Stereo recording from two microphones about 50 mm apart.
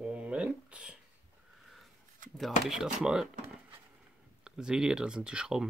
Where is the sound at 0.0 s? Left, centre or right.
Right.